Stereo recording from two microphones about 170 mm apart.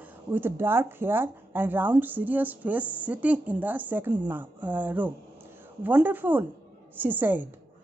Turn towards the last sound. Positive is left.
turn(degrees=-10)  # may be behind; listen again after turning